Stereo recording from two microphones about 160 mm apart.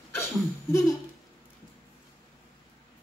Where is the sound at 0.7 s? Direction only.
20° left (ahead or behind).